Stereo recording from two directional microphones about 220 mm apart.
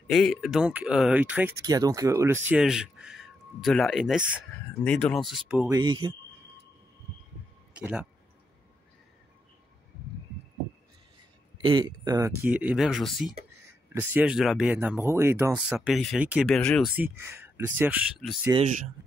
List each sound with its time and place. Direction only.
0.1 s speech: centre (ahead or behind)
5.7 s speech: 20° right (ahead or behind)
7.7 s speech: 5° right (ahead or behind)
11.6 s speech: 20° right (ahead or behind)
15.9 s speech: centre (ahead or behind)
18.5 s speech: 30° right (ahead or behind)